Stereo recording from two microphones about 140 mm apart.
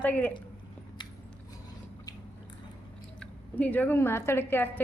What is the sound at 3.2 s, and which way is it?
Speech, 10° left (ahead or behind).